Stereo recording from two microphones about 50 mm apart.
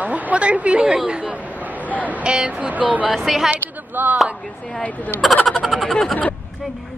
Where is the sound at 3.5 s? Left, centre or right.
Right.